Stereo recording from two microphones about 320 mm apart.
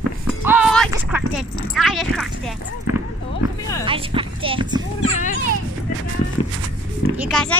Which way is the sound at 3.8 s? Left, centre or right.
Centre.